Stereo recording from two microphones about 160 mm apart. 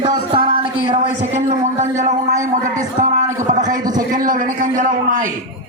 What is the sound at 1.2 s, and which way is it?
A man's voice, 45° right (ahead or behind).